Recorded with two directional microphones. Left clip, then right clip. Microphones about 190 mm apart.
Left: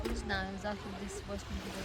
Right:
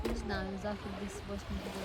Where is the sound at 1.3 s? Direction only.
50° right (ahead or behind).